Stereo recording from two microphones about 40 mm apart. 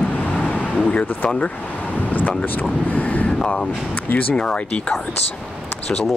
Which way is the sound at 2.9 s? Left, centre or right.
Left.